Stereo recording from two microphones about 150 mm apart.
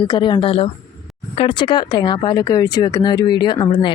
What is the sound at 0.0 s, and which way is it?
Speech, 30° left (ahead or behind).